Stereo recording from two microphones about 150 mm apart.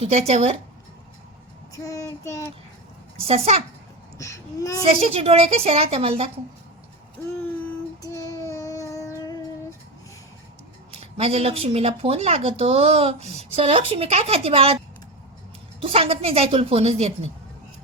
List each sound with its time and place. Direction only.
0.0 s speech: 45° right (ahead or behind)
1.7 s child singing: 20° left (ahead or behind)
3.2 s speech: 45° right (ahead or behind)
4.2 s child singing: 20° left (ahead or behind)
4.9 s speech: 40° right (ahead or behind)
8.0 s child singing: 20° left (ahead or behind)
10.9 s speech: 40° right (ahead or behind)
15.8 s speech: 40° right (ahead or behind)